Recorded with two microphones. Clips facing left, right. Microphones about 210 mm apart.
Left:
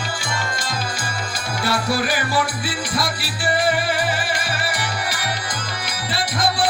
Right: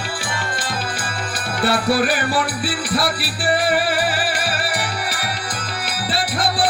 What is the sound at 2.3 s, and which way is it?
Music, 35° right (ahead or behind).